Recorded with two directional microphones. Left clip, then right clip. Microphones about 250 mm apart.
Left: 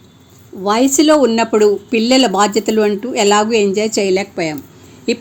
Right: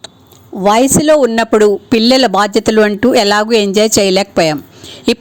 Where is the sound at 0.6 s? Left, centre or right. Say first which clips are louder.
Right 3 dB; right.